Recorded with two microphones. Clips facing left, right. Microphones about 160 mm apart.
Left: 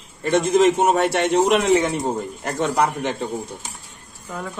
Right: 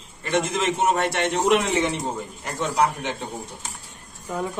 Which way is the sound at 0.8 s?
50° left (ahead or behind).